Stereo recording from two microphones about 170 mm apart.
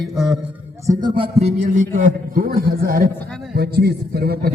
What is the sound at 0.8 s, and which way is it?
Music, 20° right (ahead or behind).